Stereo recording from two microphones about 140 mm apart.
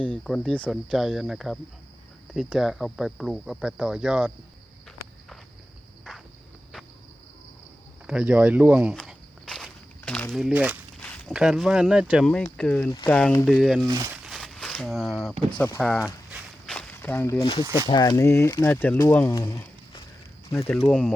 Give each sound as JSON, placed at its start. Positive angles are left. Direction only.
{"t": 0.0, "sound": "speech", "side_deg": 5}
{"t": 8.0, "sound": "speech", "side_deg": -5}
{"t": 10.1, "sound": "a sound", "side_deg": 5}
{"t": 10.3, "sound": "speech", "side_deg": -5}
{"t": 11.0, "sound": "walk", "side_deg": 10}
{"t": 11.3, "sound": "speech", "side_deg": -5}
{"t": 13.8, "sound": "speech", "side_deg": -25}
{"t": 14.1, "sound": "a sound", "side_deg": 0}
{"t": 15.4, "sound": "speech", "side_deg": 10}
{"t": 16.6, "sound": "walk", "side_deg": 10}
{"t": 17.4, "sound": "speech", "side_deg": 40}
{"t": 17.8, "sound": "speech", "side_deg": 30}